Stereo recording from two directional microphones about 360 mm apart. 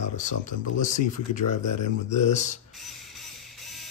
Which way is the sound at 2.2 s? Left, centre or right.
Centre.